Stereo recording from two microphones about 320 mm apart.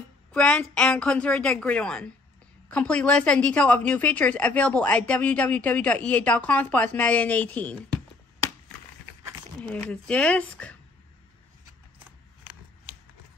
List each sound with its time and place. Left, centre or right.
0.3 s a woman's voice: centre
9.6 s a woman's voice: centre